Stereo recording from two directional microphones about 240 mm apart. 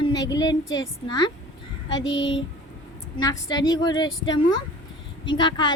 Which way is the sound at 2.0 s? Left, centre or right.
Left.